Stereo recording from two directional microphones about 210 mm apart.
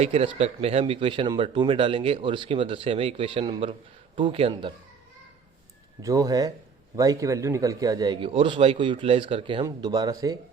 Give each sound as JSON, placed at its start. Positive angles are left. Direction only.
{"t": 0.0, "sound": "speech", "side_deg": -30}
{"t": 6.0, "sound": "speech", "side_deg": -15}